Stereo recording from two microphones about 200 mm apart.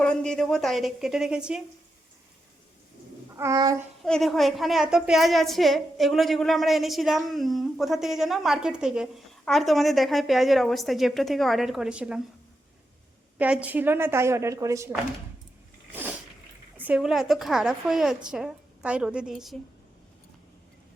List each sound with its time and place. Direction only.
0.0 s a woman's voice: 5° left (ahead or behind)
3.3 s a woman's voice: 15° right (ahead or behind)
4.0 s a woman's voice: centre (ahead or behind)
13.4 s a woman's voice: 5° right (ahead or behind)
16.8 s a woman's voice: 5° right (ahead or behind)